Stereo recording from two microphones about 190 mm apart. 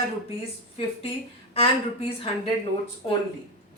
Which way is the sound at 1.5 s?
30° left (ahead or behind).